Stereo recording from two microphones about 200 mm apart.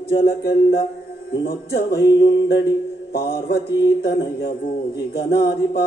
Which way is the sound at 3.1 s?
50° left (ahead or behind).